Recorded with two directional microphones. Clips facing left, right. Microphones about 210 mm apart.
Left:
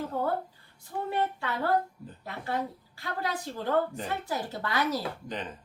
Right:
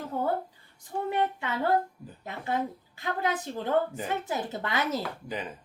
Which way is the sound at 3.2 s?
20° right (ahead or behind).